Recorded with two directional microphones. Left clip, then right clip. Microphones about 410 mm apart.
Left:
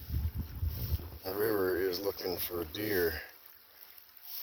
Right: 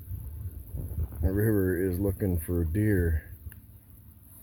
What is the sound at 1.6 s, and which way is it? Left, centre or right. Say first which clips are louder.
Speech: right 3 dB; centre.